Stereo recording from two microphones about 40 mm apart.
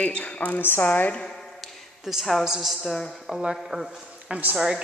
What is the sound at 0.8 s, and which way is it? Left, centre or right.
Speech, left.